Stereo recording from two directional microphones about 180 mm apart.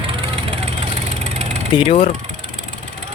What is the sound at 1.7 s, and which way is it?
Speech, 30° left (ahead or behind).